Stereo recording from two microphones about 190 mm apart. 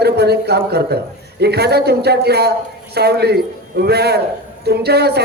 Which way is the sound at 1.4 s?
60° right (ahead or behind).